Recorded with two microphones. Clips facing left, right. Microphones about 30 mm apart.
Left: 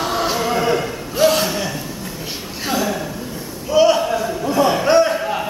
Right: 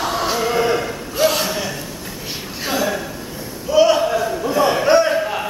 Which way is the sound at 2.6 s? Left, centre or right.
Centre.